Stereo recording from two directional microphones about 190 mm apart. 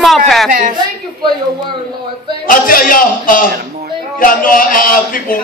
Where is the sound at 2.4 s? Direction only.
45° left (ahead or behind).